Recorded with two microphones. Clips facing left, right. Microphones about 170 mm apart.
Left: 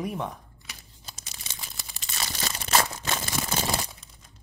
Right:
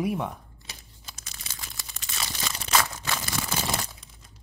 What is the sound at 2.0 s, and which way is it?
Crunch, 40° left (ahead or behind).